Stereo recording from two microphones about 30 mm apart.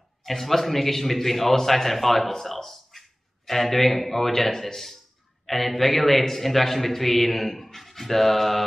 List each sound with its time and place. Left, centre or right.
0.2 s a man's voice: centre